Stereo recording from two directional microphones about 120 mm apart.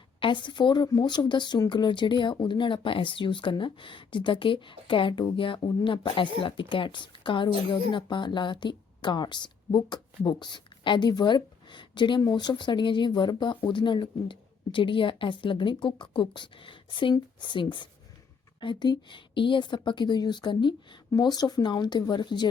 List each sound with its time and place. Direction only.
0.2 s speech: 40° left (ahead or behind)